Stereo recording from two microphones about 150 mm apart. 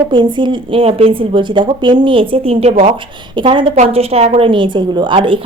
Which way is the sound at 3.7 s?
45° right (ahead or behind).